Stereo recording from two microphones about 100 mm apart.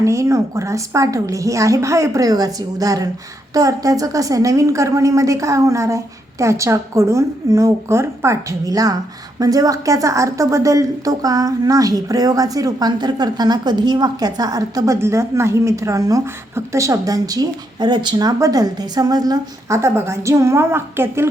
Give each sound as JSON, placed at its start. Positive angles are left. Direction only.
{"t": 0.0, "sound": "a woman's voice", "side_deg": -30}